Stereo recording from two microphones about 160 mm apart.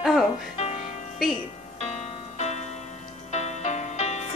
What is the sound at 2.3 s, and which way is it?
Music, 45° left (ahead or behind).